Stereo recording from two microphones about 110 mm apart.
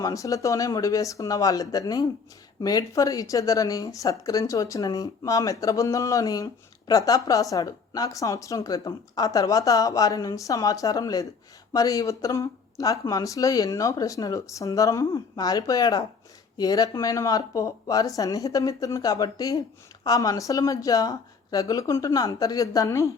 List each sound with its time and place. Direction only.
0.0 s speech: 30° left (ahead or behind)